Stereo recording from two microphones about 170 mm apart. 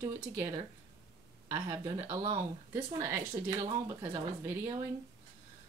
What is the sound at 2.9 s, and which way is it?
Speech, 15° right (ahead or behind).